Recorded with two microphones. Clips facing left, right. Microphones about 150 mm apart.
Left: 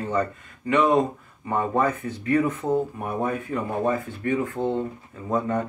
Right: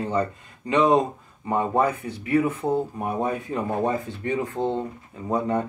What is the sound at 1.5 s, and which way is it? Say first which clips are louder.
Speech: right 1 dB; 15° right (ahead or behind).